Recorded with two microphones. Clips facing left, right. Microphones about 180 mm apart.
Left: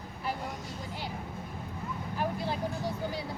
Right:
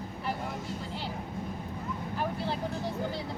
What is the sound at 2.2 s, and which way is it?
Speech, 15° left (ahead or behind).